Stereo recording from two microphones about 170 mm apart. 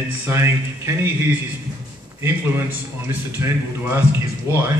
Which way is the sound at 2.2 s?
15° right (ahead or behind).